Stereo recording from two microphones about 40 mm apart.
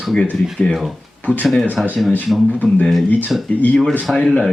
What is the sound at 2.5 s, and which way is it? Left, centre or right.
Speech, left.